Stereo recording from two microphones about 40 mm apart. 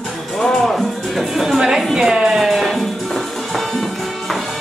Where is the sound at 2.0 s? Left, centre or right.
Centre.